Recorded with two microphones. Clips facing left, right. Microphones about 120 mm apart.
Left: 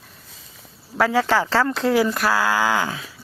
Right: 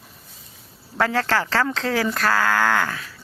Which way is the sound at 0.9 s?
5° left (ahead or behind).